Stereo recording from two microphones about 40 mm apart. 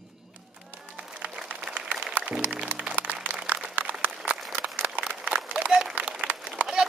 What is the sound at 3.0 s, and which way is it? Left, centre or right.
Applause, right.